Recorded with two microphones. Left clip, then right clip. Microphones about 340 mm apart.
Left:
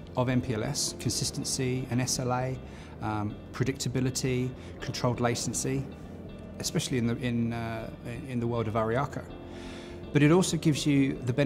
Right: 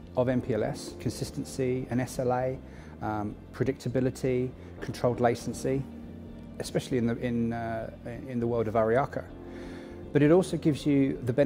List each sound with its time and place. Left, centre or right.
0.1 s speech: right